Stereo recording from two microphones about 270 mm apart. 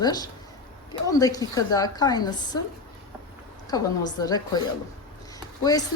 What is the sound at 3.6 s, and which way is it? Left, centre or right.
Speech, centre.